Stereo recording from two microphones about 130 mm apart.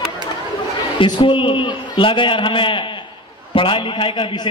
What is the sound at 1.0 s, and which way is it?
A man's voice, 40° left (ahead or behind).